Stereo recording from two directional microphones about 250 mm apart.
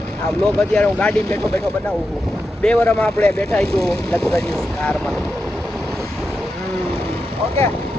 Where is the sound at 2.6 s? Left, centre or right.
Centre.